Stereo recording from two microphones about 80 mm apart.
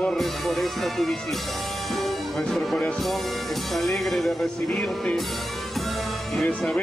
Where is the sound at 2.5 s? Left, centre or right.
Centre.